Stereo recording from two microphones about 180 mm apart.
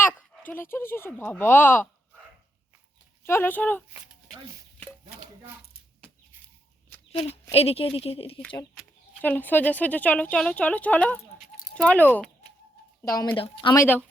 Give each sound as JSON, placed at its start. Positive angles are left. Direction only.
{"t": 0.0, "sound": "speech", "side_deg": 10}
{"t": 3.2, "sound": "speech", "side_deg": 10}
{"t": 7.1, "sound": "speech", "side_deg": 35}
{"t": 9.2, "sound": "speech", "side_deg": 10}
{"t": 13.3, "sound": "speech", "side_deg": 30}
{"t": 13.7, "sound": "speech", "side_deg": 10}